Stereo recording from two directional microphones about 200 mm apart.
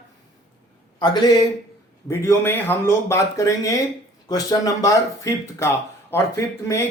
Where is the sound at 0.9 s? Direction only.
20° left (ahead or behind).